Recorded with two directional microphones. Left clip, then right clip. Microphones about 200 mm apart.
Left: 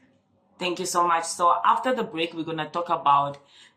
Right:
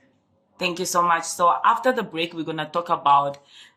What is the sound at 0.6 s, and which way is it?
Speech, 40° right (ahead or behind).